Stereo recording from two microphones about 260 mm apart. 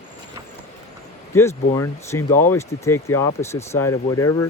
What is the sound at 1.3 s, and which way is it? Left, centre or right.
Speech, centre.